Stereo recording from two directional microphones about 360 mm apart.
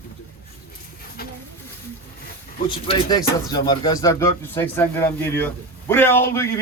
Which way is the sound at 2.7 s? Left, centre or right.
Centre.